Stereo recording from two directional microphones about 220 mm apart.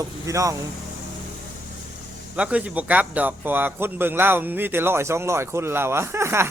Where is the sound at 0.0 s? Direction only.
15° right (ahead or behind).